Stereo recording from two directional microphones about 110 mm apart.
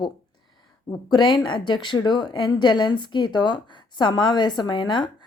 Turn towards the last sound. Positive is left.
turn(degrees=45)  # may be behind; listen again after turning